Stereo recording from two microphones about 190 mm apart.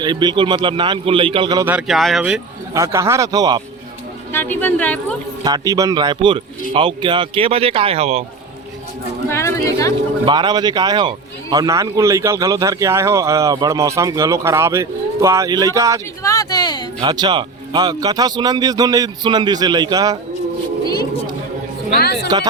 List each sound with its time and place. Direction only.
0.0 s speech: 20° right (ahead or behind)
1.6 s speech: 5° right (ahead or behind)
2.7 s a man's voice: 15° right (ahead or behind)
4.3 s speech: 10° left (ahead or behind)
5.4 s speech: 20° right (ahead or behind)
9.3 s speech: 15° left (ahead or behind)
10.2 s a man's voice: 25° right (ahead or behind)
16.2 s a sound: 20° left (ahead or behind)
17.0 s speech: 20° right (ahead or behind)
21.9 s speech: 60° left (ahead or behind)